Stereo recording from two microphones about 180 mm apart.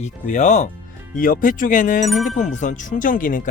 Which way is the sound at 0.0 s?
40° left (ahead or behind).